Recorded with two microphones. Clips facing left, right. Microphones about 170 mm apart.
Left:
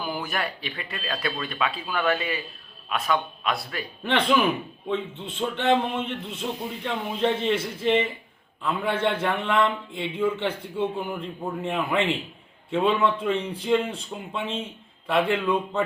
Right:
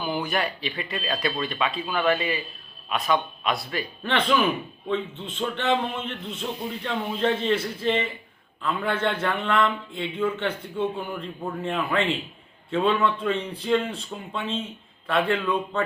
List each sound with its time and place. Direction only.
0.0 s speech: centre (ahead or behind)
4.0 s a man's voice: 15° left (ahead or behind)